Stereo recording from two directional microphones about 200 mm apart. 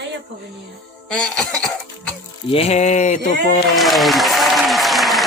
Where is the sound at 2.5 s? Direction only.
30° left (ahead or behind).